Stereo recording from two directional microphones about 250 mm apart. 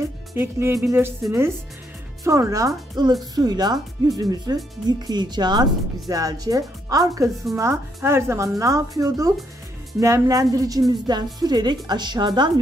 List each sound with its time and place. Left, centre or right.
0.4 s speech: centre